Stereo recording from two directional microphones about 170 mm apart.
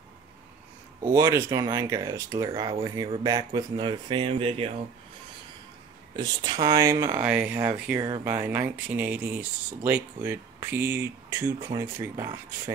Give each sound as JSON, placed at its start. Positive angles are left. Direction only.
{"t": 1.1, "sound": "speech", "side_deg": -20}
{"t": 6.1, "sound": "speech", "side_deg": -25}